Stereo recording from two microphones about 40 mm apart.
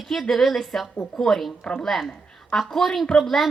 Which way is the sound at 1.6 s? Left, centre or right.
Left.